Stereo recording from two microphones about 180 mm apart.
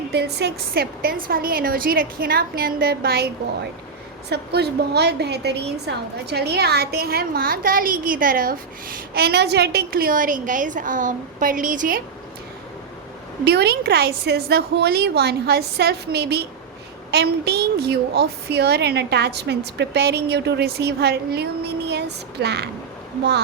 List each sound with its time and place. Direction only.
0.1 s a woman's voice: 65° right (ahead or behind); by 12.0 s 50° right (ahead or behind)
13.4 s a woman's voice: 65° right (ahead or behind)